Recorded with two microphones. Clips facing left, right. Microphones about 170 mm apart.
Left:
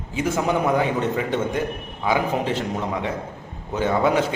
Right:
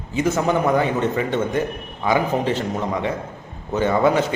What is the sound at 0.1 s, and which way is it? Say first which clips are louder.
A man's voice: right 3 dB; 10° left (ahead or behind).